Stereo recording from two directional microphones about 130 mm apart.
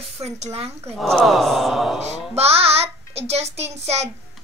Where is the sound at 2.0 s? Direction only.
55° right (ahead or behind).